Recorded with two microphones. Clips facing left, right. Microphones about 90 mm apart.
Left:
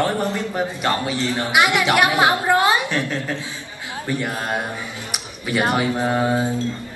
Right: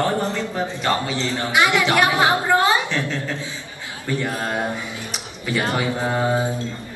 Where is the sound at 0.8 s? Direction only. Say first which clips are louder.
Right 1 dB; 15° left (ahead or behind).